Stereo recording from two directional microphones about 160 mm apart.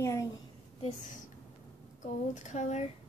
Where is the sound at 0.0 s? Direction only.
20° left (ahead or behind).